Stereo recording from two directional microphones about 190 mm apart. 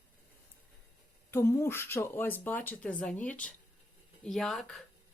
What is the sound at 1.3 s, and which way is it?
Speech, 15° left (ahead or behind).